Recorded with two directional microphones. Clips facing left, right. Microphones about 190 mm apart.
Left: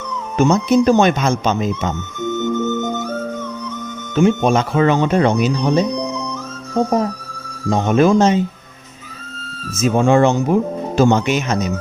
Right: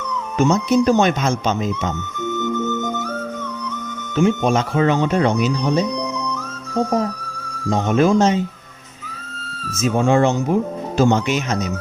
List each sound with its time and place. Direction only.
0.3 s speech: 55° left (ahead or behind)
2.3 s music: 25° left (ahead or behind)
4.1 s speech: 60° left (ahead or behind)
7.7 s speech: 60° left (ahead or behind)
9.9 s speech: 65° left (ahead or behind)